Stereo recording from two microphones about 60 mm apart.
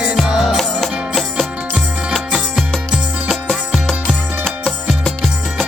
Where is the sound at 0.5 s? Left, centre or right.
Centre.